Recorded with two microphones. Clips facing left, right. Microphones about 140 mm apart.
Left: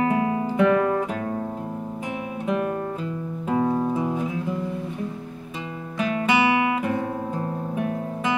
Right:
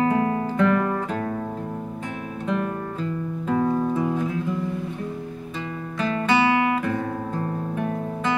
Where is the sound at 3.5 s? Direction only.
20° left (ahead or behind).